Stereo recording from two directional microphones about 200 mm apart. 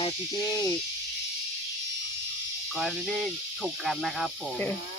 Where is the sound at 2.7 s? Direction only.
Centre (ahead or behind).